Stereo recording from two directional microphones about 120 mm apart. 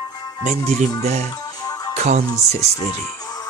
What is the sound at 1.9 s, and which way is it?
Music, 70° right (ahead or behind).